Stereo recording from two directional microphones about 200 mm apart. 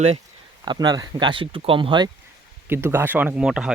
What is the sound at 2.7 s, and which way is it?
Speech, 10° right (ahead or behind).